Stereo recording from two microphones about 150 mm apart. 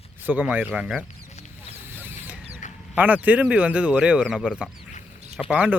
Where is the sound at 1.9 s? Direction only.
15° right (ahead or behind).